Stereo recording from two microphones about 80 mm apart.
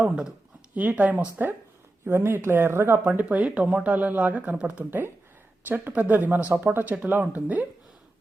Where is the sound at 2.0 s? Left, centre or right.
Right.